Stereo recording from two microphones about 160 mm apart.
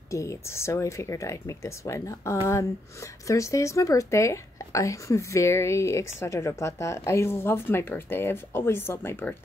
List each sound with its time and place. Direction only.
0.1 s speech: 20° left (ahead or behind)